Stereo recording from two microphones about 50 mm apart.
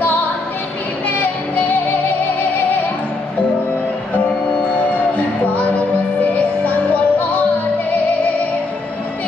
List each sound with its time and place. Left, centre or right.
1.0 s music: left
4.9 s music: left